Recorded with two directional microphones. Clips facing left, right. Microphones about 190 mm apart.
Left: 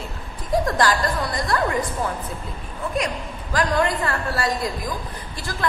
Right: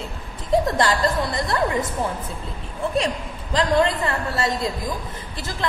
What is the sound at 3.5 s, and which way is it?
A woman's voice, 25° right (ahead or behind).